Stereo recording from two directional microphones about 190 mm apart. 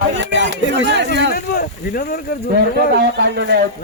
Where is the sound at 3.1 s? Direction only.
65° right (ahead or behind).